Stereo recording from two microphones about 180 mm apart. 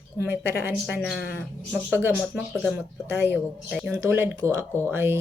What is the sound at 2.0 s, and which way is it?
Speech, 5° right (ahead or behind).